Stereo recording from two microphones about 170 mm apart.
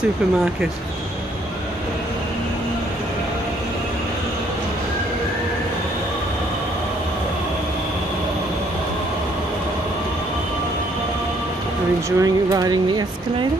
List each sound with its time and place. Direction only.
12.2 s speech: 20° right (ahead or behind)